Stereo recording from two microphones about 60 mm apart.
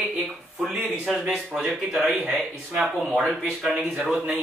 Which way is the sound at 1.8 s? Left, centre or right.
Centre.